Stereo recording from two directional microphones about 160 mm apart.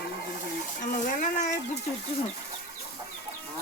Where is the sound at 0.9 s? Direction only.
50° left (ahead or behind).